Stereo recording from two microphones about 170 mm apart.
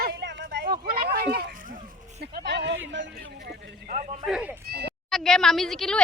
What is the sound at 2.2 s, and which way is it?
Speech, 80° right.